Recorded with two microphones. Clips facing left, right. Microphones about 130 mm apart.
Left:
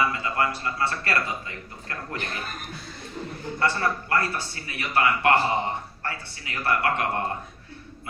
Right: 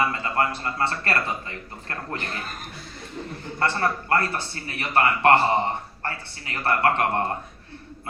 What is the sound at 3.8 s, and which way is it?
A man's voice, 40° right (ahead or behind).